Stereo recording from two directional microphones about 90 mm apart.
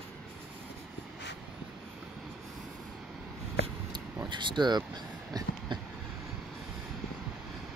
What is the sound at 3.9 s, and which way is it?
Vehicle, 55° right (ahead or behind).